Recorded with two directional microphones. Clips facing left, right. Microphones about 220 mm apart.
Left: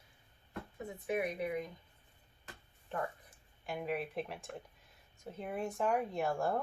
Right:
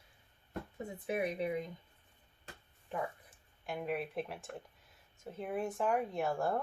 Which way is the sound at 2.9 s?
5° right (ahead or behind).